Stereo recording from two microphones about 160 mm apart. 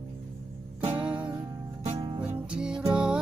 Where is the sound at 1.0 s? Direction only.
10° right (ahead or behind).